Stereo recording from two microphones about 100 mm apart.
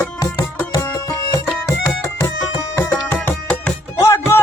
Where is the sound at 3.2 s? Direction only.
10° left (ahead or behind).